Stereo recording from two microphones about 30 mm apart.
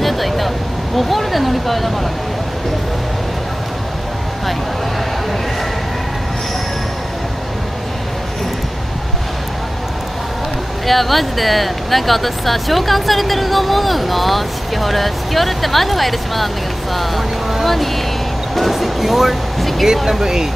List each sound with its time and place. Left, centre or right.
0.0 s a sound: centre
10.9 s speech: centre
18.5 s music: centre
20.1 s speech: centre